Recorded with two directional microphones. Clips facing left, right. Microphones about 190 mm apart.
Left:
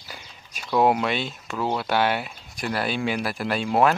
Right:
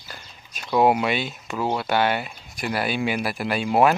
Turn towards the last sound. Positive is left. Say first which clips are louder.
# right 2 dB
turn(degrees=-10)  # may be behind; listen again after turning